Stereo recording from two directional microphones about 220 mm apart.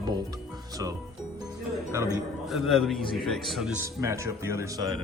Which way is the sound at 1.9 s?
15° right (ahead or behind).